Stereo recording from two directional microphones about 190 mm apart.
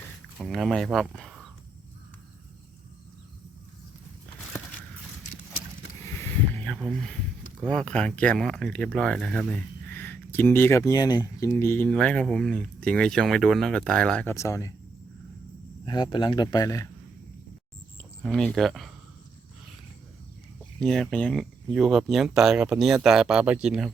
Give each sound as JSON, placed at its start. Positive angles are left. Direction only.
{"t": 0.3, "sound": "speech", "side_deg": 0}
{"t": 6.1, "sound": "a sound", "side_deg": 10}
{"t": 7.6, "sound": "speech", "side_deg": 5}
{"t": 15.9, "sound": "speech", "side_deg": 25}
{"t": 18.2, "sound": "speech", "side_deg": 5}
{"t": 20.8, "sound": "speech", "side_deg": 0}